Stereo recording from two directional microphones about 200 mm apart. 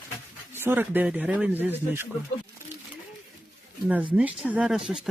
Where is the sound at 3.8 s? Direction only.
10° right (ahead or behind).